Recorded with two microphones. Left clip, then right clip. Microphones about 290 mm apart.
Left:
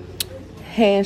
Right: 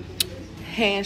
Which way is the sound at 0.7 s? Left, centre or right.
Left.